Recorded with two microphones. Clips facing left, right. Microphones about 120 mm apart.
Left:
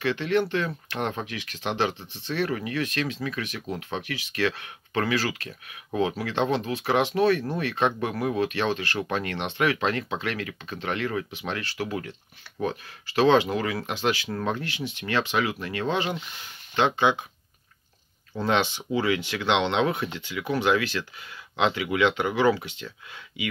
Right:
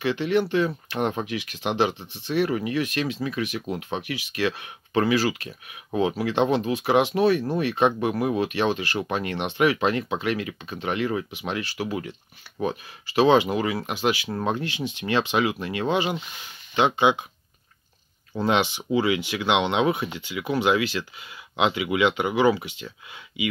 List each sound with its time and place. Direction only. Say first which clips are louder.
0.0 s speech: right 2 dB; 15° right (ahead or behind)
18.3 s speech: right 2 dB; 15° right (ahead or behind)